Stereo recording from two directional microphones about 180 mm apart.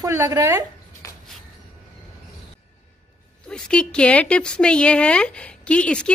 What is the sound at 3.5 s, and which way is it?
A woman's voice, 5° left (ahead or behind).